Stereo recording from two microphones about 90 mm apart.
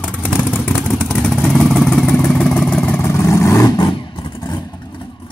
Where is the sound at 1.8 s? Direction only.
10° left (ahead or behind).